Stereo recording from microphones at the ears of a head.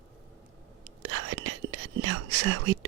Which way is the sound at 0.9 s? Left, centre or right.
Right.